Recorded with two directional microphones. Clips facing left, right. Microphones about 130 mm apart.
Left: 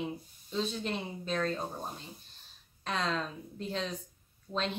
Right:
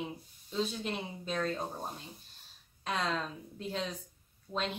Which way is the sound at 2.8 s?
10° right (ahead or behind).